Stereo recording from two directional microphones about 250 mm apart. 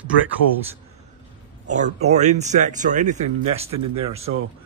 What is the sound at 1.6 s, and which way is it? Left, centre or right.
Speech, right.